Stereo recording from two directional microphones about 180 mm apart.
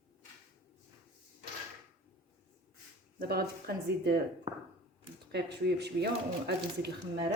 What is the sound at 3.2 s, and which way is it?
Speech, 60° right (ahead or behind).